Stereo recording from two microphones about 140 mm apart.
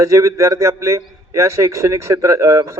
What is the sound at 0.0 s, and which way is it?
A man's voice, 25° right (ahead or behind).